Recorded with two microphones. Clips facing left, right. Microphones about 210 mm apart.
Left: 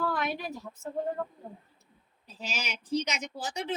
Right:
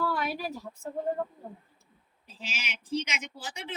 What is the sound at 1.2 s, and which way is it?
Speech, 15° right (ahead or behind).